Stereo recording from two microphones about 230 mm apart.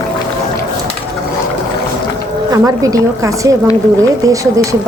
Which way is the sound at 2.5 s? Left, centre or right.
Centre.